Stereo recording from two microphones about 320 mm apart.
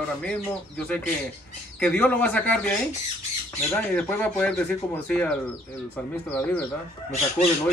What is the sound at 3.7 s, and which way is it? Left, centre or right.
A man's voice, centre.